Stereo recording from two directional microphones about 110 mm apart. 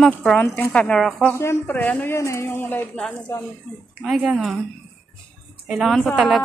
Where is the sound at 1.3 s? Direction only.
25° left (ahead or behind).